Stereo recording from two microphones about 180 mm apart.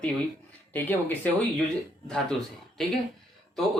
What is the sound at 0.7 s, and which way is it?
A man's voice, 10° left (ahead or behind).